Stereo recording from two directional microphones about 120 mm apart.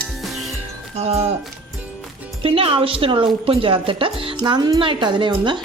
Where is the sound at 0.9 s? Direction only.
60° right (ahead or behind).